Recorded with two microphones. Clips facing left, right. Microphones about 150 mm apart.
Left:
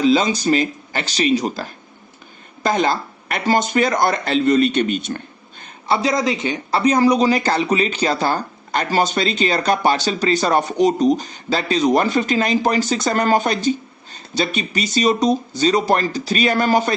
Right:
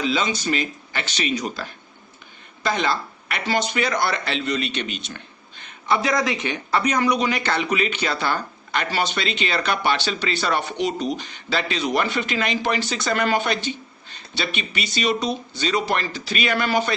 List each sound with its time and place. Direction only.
0.0 s a man's voice: 40° left (ahead or behind)
6.0 s a man's voice: 25° left (ahead or behind); by 16.9 s 40° left (ahead or behind)